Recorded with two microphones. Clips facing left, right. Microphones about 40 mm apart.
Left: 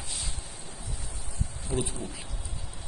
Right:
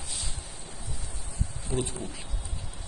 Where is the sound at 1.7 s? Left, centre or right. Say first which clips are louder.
Even; centre.